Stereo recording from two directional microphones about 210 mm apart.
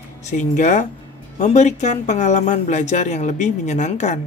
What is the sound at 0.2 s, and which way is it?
Speech, 35° left (ahead or behind).